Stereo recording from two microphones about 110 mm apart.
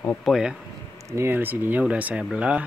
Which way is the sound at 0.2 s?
5° right (ahead or behind).